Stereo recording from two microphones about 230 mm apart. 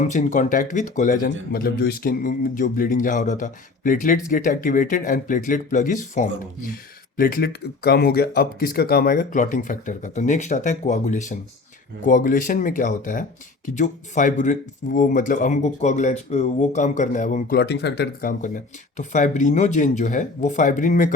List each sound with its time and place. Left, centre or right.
0.0 s speech: left
17.6 s speech: left